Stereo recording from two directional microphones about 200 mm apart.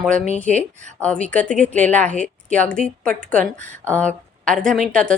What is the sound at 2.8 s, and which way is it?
Speech, 35° left (ahead or behind).